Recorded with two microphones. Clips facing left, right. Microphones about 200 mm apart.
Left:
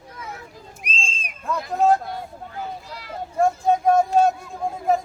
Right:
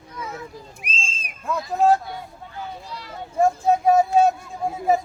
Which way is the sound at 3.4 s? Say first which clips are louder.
Right 1 dB; 5° right (ahead or behind).